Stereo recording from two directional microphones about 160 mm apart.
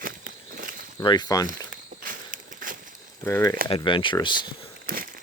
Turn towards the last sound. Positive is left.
turn(degrees=-60)  # may be behind; listen again after turning